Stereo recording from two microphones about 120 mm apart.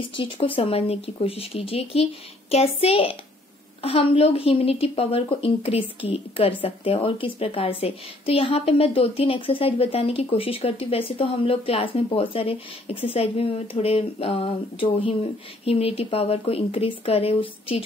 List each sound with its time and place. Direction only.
0.1 s a woman's voice: 45° left (ahead or behind)